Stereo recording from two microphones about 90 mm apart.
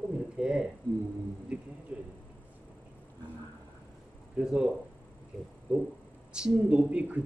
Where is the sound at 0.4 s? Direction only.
10° right (ahead or behind).